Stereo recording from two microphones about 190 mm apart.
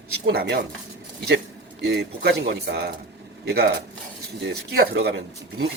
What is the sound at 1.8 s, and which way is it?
Speech, 60° right (ahead or behind).